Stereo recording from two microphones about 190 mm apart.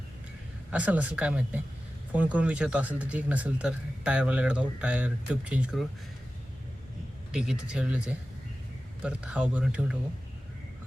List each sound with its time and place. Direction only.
0.7 s speech: 5° right (ahead or behind)
7.3 s speech: 5° right (ahead or behind)